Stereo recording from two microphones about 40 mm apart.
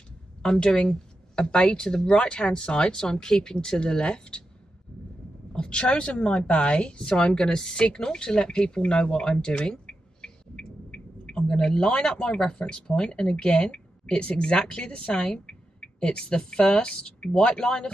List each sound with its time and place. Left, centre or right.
0.4 s speech: centre
5.5 s a woman's voice: left